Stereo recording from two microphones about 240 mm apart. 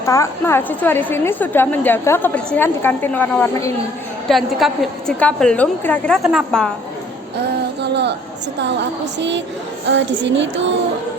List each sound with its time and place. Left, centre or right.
0.0 s a woman's voice: centre
7.3 s a sound: right
9.1 s speech: right